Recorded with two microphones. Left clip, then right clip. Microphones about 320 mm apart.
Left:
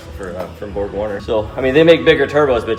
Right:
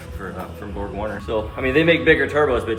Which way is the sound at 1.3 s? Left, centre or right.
Left.